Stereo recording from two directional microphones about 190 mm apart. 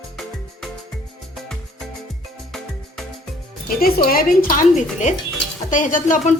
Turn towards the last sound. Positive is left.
turn(degrees=45)  # may be behind; listen again after turning